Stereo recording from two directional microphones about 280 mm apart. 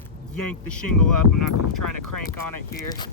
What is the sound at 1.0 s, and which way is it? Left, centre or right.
Speech, left.